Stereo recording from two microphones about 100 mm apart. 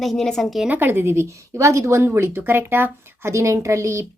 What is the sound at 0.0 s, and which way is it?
Speech, 5° left (ahead or behind).